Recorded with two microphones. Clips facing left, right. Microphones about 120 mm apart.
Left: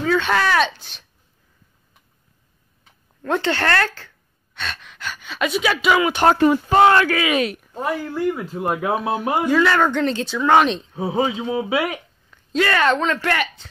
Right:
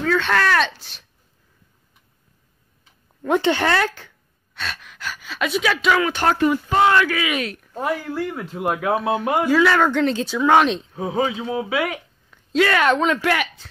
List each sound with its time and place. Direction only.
0.0 s speech: 5° left (ahead or behind)
3.2 s speech: 10° right (ahead or behind); by 6.2 s 10° left (ahead or behind)
6.2 s speech: 30° left (ahead or behind)
6.7 s speech: 45° left (ahead or behind)
7.5 s speech: 10° left (ahead or behind)
7.8 s speech: centre (ahead or behind)
12.3 s speech: centre (ahead or behind)